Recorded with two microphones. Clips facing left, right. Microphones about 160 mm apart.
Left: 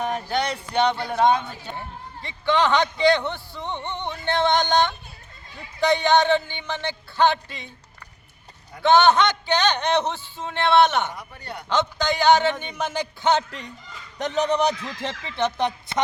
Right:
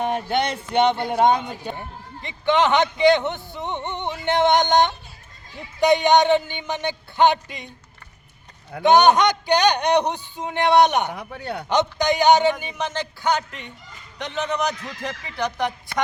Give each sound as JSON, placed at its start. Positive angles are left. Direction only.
{"t": 0.0, "sound": "speech", "side_deg": -25}
{"t": 8.8, "sound": "speech", "side_deg": -15}
{"t": 11.1, "sound": "speech", "side_deg": -65}
{"t": 11.7, "sound": "speech", "side_deg": -20}
{"t": 13.2, "sound": "a woman's voice", "side_deg": 30}